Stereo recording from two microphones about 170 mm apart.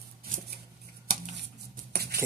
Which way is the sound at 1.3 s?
80° right.